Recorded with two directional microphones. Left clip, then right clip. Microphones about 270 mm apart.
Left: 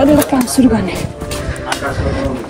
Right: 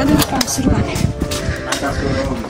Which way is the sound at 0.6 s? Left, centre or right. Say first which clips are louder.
Left 6 dB; centre.